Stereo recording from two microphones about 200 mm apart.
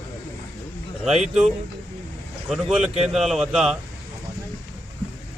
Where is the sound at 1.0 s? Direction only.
Centre (ahead or behind).